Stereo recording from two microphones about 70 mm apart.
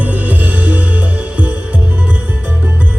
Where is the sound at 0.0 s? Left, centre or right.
Right.